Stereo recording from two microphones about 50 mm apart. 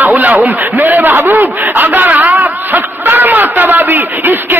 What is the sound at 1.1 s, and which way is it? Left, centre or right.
Speech, right.